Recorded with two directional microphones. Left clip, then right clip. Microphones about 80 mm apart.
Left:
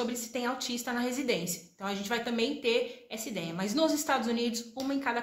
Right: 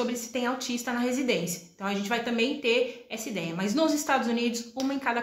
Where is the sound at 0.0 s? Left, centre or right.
Left.